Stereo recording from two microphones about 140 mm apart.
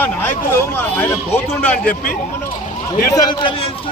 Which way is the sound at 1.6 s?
10° left (ahead or behind).